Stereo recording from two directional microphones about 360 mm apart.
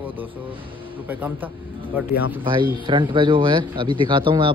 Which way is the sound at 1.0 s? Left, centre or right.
Centre.